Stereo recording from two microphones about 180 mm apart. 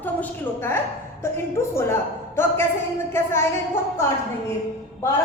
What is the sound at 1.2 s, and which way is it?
A woman's voice, 15° left (ahead or behind).